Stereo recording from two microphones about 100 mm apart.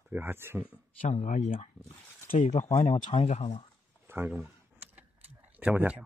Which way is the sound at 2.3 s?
65° left (ahead or behind).